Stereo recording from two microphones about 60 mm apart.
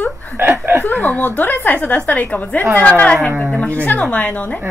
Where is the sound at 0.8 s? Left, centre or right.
Left.